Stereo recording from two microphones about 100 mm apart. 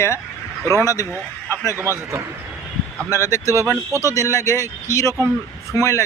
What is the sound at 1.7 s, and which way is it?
Speech, 25° right (ahead or behind).